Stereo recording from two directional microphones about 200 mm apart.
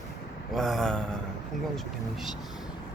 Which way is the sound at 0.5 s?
Centre (ahead or behind).